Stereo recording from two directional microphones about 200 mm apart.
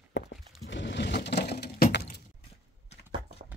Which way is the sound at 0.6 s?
60° left (ahead or behind).